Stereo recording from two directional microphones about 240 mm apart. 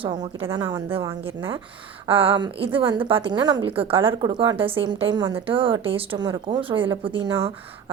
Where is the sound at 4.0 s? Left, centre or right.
Centre.